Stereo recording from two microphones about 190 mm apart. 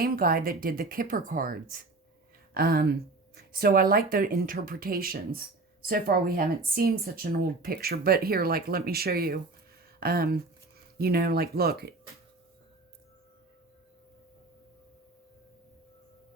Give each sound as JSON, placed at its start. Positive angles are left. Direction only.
{"t": 0.0, "sound": "speech", "side_deg": -50}